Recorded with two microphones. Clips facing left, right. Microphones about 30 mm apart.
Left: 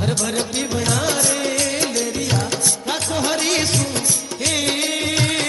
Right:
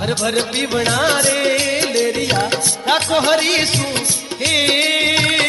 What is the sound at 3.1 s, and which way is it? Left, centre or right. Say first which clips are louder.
Music: right 4 dB; right.